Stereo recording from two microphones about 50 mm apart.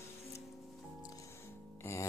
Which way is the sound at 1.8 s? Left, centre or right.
Left.